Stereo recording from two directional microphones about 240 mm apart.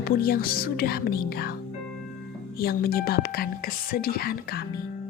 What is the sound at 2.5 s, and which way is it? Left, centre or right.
Speech, left.